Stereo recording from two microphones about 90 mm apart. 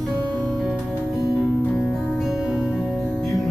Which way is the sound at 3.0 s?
5° left (ahead or behind).